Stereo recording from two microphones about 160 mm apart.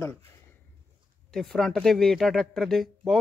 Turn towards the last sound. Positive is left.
turn(degrees=0)  # may be behind; listen again after turning